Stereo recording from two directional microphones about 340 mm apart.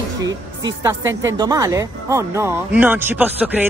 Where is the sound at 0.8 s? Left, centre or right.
Centre.